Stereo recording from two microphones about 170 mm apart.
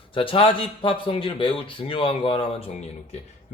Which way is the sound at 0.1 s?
30° left (ahead or behind).